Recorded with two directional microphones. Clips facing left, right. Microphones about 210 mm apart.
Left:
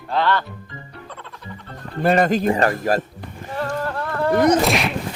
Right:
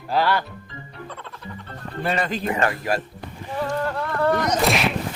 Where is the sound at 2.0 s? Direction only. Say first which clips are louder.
Left 8 dB; 45° left (ahead or behind).